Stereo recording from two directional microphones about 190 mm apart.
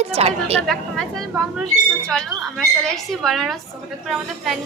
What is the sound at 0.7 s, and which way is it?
A woman's voice, centre (ahead or behind).